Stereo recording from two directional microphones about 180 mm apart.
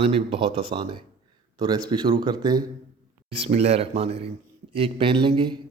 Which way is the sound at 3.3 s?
35° right (ahead or behind).